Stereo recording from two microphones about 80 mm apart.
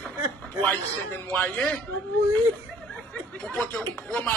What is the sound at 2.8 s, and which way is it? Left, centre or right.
Snicker, centre.